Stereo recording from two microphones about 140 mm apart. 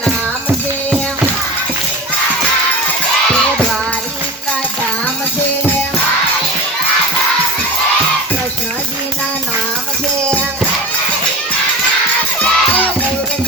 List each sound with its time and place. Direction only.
12.4 s music: 10° left (ahead or behind)